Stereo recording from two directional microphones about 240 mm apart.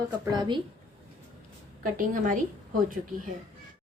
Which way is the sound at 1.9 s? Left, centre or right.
Right.